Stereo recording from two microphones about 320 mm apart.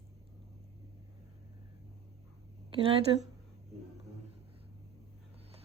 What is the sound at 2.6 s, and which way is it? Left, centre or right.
Speech, centre.